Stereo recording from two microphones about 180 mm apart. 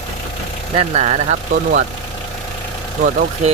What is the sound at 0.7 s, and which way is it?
Speech, 35° right (ahead or behind).